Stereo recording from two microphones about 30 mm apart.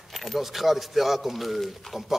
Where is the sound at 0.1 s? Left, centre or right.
Centre.